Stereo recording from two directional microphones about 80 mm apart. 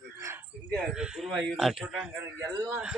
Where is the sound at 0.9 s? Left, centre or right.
Centre.